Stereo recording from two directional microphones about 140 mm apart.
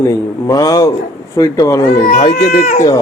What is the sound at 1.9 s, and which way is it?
Speech, 55° left (ahead or behind).